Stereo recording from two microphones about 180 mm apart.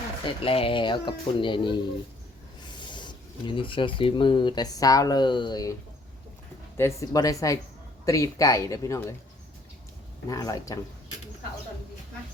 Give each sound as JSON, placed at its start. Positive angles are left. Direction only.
{"t": 0.4, "sound": "speech", "side_deg": 30}
{"t": 6.7, "sound": "speech", "side_deg": 15}
{"t": 10.2, "sound": "speech", "side_deg": 20}